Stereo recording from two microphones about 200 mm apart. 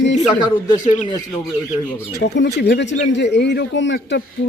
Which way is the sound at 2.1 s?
60° left (ahead or behind).